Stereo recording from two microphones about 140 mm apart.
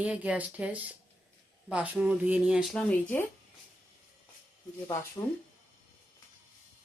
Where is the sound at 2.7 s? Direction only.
10° left (ahead or behind).